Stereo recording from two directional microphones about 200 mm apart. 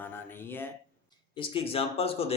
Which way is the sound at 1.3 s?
30° left (ahead or behind).